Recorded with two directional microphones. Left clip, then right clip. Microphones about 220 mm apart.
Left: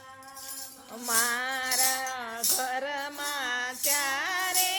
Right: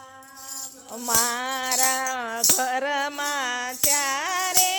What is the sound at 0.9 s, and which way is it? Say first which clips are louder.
Music: right 4 dB; 20° right (ahead or behind).